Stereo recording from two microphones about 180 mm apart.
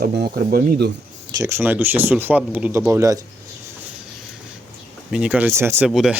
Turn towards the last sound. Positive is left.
turn(degrees=0)  # may be behind; listen again after turning